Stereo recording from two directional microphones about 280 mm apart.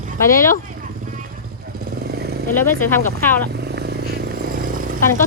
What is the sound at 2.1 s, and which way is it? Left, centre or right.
Vehicle, right.